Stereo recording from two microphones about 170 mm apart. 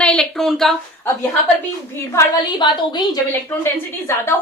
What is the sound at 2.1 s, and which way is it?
A woman's voice, 25° left (ahead or behind).